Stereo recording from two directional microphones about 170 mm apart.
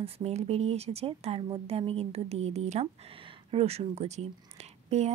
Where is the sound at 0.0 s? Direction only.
40° right (ahead or behind).